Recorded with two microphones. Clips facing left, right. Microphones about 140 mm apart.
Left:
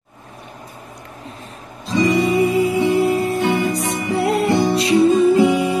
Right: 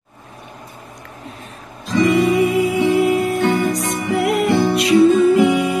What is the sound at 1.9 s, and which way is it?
Music, 30° left (ahead or behind).